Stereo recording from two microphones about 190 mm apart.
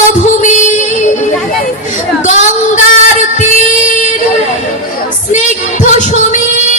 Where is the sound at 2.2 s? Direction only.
40° left (ahead or behind).